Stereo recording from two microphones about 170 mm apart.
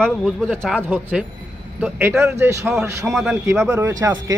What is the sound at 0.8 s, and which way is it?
Speech, 10° right (ahead or behind).